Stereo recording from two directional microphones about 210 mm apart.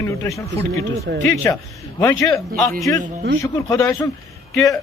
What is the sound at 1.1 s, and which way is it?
Speech, 50° right (ahead or behind).